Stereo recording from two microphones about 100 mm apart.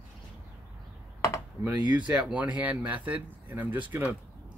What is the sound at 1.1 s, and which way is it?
Computer keyboard, 30° left (ahead or behind).